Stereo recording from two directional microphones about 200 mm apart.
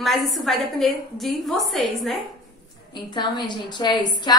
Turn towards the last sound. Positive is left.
turn(degrees=20)  # may be behind; listen again after turning